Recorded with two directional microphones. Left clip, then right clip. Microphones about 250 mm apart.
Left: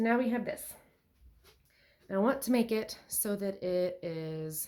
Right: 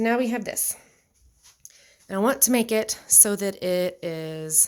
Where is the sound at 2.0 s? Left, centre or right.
Right.